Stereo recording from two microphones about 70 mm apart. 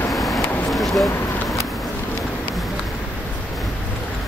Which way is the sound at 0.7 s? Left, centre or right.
Centre.